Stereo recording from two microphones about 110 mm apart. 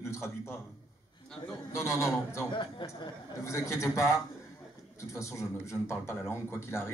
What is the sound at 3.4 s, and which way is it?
A man's voice, 25° left (ahead or behind).